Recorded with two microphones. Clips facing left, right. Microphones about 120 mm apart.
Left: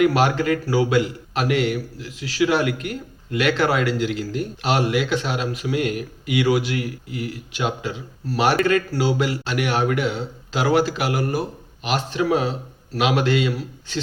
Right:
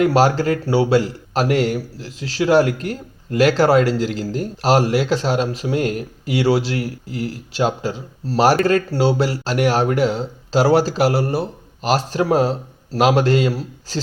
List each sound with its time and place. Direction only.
0.0 s a man's voice: 35° right (ahead or behind)